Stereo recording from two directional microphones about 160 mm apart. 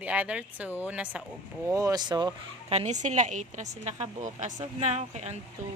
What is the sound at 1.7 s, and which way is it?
Speech, 20° right (ahead or behind).